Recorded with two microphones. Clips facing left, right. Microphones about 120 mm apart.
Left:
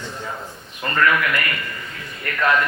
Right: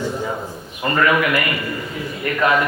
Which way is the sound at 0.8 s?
15° right (ahead or behind).